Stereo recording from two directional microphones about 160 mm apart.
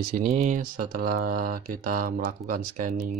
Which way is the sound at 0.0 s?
65° right (ahead or behind).